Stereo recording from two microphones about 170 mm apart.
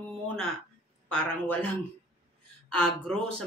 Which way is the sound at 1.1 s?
10° left (ahead or behind).